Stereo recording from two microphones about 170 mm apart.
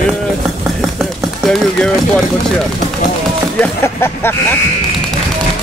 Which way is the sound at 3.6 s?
15° left (ahead or behind).